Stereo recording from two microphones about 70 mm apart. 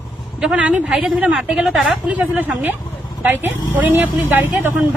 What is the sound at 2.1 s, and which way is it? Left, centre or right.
Speech, right.